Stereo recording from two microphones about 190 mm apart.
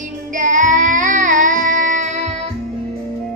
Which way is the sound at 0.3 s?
40° right (ahead or behind).